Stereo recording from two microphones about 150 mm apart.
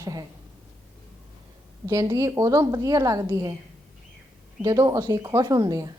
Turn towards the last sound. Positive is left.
turn(degrees=-25)  # may be behind; listen again after turning